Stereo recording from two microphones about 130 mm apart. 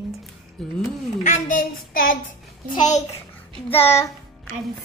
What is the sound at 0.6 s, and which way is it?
Speech, centre (ahead or behind).